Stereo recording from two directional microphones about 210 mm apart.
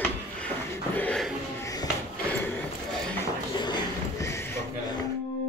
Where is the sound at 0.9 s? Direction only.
5° left (ahead or behind).